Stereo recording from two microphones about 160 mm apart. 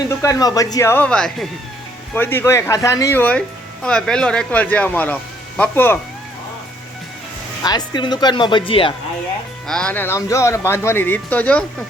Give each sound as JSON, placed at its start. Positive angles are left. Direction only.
{"t": 0.2, "sound": "a man's voice", "side_deg": 20}
{"t": 7.6, "sound": "speech", "side_deg": 25}
{"t": 9.6, "sound": "a man's voice", "side_deg": 5}